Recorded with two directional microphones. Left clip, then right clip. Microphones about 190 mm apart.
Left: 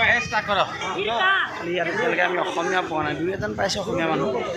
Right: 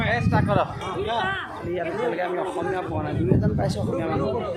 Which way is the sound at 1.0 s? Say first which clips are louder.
Left 6 dB; 30° left (ahead or behind).